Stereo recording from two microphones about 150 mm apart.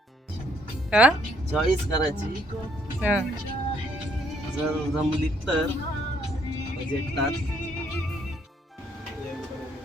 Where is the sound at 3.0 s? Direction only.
10° right (ahead or behind).